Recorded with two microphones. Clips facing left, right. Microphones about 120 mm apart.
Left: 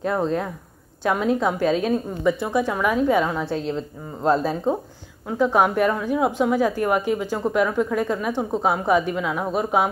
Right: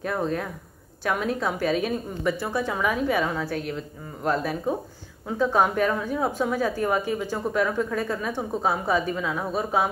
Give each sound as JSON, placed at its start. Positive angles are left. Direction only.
{"t": 0.0, "sound": "a woman's voice", "side_deg": 25}
{"t": 5.4, "sound": "a woman's voice", "side_deg": 10}